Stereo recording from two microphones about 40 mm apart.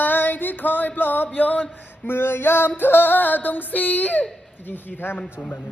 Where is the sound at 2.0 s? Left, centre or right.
Left.